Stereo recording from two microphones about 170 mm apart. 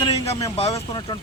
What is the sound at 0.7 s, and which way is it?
Speech, 25° left (ahead or behind).